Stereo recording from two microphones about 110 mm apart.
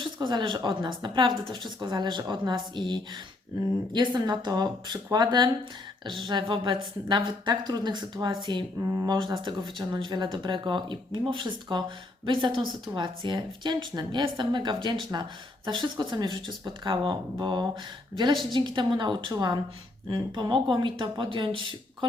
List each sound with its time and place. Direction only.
0.0 s a woman's voice: 45° right (ahead or behind)
8.8 s speech: 30° right (ahead or behind)
9.0 s a woman's voice: 45° right (ahead or behind)